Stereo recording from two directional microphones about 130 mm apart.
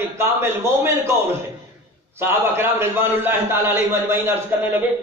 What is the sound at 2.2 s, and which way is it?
A man's voice, 15° right (ahead or behind).